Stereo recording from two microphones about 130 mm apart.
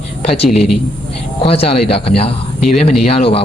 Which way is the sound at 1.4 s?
45° left (ahead or behind).